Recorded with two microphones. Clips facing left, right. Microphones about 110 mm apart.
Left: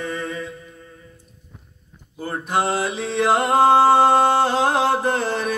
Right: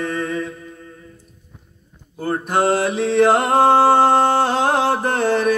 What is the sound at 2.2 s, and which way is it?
Mantra, 50° right (ahead or behind).